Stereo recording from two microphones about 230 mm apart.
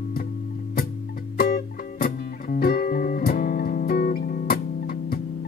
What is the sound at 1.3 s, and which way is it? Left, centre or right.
Music, left.